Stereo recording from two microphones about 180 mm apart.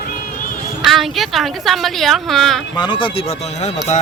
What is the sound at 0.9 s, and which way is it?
Speech, centre (ahead or behind).